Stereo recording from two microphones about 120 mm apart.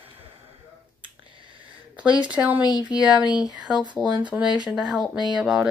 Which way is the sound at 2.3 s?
10° right (ahead or behind).